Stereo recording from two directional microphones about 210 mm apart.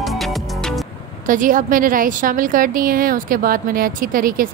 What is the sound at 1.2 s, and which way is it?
A woman's voice, 40° right (ahead or behind).